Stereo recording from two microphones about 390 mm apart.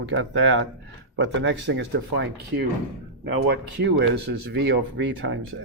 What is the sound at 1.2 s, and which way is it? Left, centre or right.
Speech, right.